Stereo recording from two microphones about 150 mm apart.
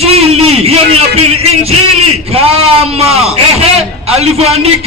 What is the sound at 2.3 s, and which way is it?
Speech, 40° right (ahead or behind).